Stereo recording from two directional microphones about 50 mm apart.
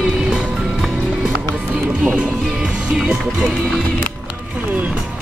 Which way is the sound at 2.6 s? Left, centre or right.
Centre.